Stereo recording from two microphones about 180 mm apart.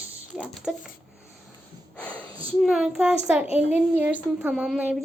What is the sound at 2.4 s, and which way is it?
A woman's voice, 5° right (ahead or behind).